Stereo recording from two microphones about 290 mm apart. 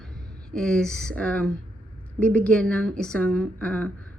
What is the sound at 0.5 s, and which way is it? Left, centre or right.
Speech, centre.